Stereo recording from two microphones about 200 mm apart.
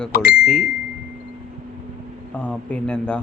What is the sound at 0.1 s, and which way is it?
Speech, 50° left (ahead or behind).